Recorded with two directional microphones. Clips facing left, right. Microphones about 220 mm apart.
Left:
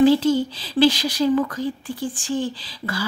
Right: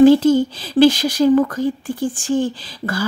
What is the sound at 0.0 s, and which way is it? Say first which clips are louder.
Speech: right 5 dB; 50° right (ahead or behind).